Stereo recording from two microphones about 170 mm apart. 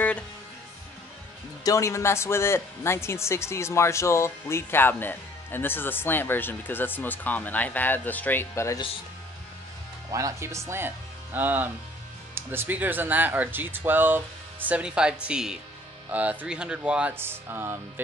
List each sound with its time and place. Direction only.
1.6 s speech: 20° left (ahead or behind)
10.1 s speech: 15° right (ahead or behind)